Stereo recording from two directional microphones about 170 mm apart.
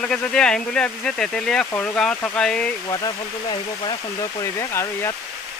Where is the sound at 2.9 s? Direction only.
25° left (ahead or behind).